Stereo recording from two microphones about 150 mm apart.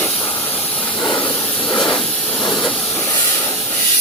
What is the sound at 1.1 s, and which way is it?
Hiss, 30° left (ahead or behind).